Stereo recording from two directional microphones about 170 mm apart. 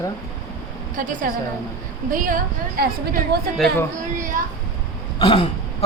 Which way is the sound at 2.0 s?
55° right (ahead or behind).